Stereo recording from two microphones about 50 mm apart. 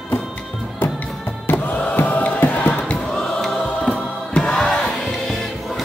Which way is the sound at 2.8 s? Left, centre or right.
Centre.